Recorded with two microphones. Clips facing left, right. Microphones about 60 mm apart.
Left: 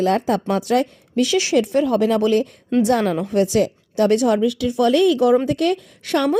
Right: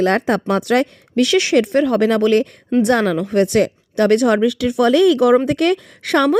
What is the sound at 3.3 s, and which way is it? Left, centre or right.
A woman's voice, right.